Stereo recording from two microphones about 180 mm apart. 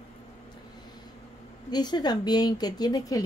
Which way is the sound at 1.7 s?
25° left (ahead or behind).